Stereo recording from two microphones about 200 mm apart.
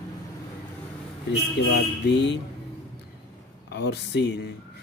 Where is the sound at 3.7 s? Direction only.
60° left (ahead or behind).